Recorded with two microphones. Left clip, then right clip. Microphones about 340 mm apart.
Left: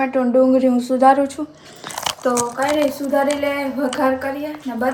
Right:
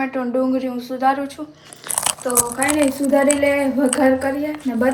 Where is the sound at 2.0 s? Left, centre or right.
Left.